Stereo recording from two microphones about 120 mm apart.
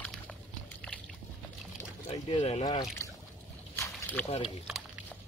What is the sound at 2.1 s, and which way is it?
Speech, 50° left (ahead or behind).